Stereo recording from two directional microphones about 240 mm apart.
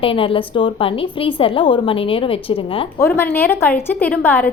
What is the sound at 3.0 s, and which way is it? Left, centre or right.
A woman's voice, centre.